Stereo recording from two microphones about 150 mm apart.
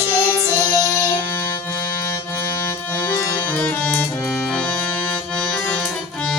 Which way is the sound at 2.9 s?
15° left (ahead or behind).